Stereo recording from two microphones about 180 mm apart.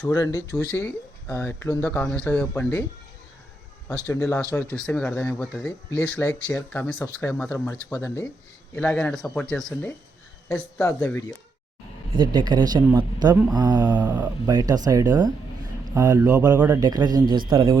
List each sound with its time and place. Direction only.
0.0 s speech: 20° left (ahead or behind)
4.0 s speech: 15° left (ahead or behind)
12.1 s speech: 25° right (ahead or behind)
14.0 s speech: 10° right (ahead or behind)
14.4 s speech: 20° right (ahead or behind)
16.8 s speech: 20° right (ahead or behind)